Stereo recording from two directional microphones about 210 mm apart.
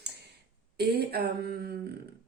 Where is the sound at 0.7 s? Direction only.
50° right (ahead or behind).